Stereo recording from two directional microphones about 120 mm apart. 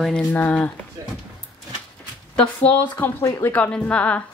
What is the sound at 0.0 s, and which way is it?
Speech, 5° left (ahead or behind).